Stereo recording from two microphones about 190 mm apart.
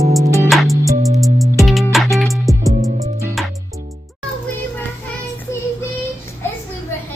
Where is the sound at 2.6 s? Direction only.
15° right (ahead or behind).